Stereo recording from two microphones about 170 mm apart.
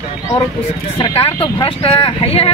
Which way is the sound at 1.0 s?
35° left (ahead or behind).